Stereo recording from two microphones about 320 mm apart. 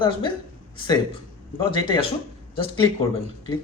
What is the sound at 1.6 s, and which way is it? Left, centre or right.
Speech, centre.